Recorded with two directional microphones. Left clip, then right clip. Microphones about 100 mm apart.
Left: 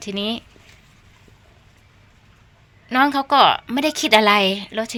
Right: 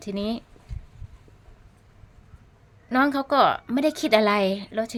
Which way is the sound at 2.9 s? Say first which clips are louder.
Left 5 dB; 20° right (ahead or behind).